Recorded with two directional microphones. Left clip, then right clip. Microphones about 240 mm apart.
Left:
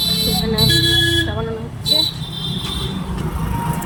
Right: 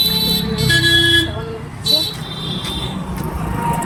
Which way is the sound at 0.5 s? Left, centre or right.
Centre.